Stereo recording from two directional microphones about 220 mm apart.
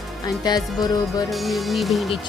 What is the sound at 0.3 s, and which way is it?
Music, 15° left (ahead or behind).